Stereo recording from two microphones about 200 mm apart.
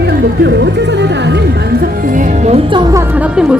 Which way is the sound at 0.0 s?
55° right (ahead or behind).